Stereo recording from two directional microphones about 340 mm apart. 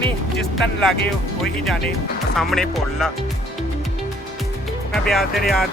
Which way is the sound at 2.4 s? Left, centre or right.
Centre.